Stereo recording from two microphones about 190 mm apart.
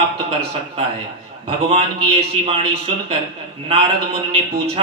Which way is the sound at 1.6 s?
30° right (ahead or behind).